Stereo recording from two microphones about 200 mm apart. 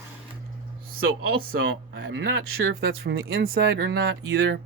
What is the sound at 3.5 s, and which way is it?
Speech, 55° right (ahead or behind).